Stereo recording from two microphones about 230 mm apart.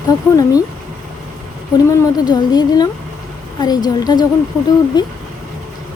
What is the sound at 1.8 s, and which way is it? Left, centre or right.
Music, centre.